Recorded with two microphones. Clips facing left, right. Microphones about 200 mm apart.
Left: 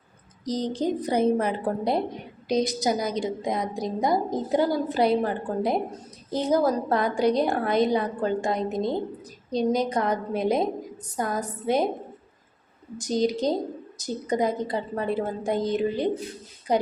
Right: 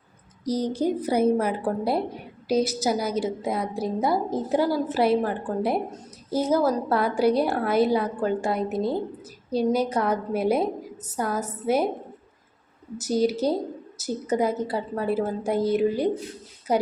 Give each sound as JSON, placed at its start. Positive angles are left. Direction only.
{"t": 0.4, "sound": "a woman's voice", "side_deg": -10}
{"t": 6.5, "sound": "a woman's voice", "side_deg": 15}
{"t": 6.9, "sound": "a woman's voice", "side_deg": -5}
{"t": 13.0, "sound": "a woman's voice", "side_deg": -10}